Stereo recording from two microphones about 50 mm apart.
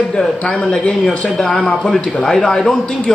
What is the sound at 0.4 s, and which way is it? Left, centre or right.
A man's voice, left.